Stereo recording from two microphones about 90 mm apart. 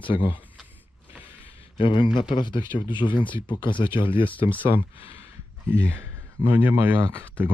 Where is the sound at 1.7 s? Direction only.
65° left (ahead or behind).